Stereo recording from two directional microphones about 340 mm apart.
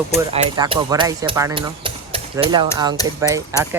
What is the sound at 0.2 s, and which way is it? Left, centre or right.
Speech, centre.